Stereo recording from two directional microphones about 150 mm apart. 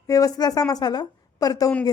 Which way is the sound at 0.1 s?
25° left (ahead or behind).